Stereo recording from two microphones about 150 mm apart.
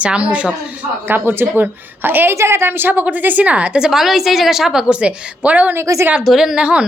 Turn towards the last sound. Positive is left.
turn(degrees=-5)  # may be behind; listen again after turning